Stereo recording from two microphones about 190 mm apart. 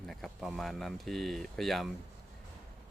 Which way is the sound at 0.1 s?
Centre (ahead or behind).